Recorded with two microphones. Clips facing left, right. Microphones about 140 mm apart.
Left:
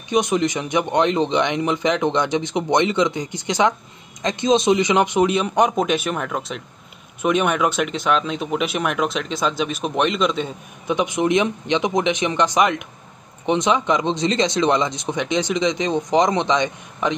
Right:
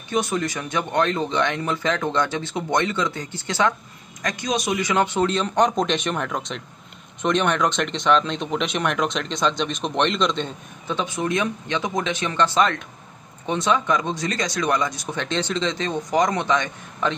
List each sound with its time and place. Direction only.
0.1 s speech: 20° left (ahead or behind)
11.0 s speech: 20° left (ahead or behind)